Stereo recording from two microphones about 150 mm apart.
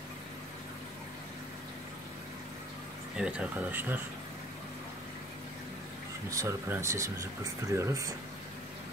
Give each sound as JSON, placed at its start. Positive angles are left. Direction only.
{"t": 3.2, "sound": "speech", "side_deg": -10}
{"t": 6.3, "sound": "speech", "side_deg": -20}